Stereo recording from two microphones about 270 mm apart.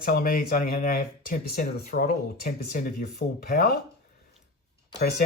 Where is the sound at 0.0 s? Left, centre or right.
Left.